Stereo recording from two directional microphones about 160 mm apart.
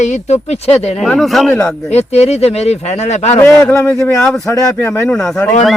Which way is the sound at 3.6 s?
15° left (ahead or behind).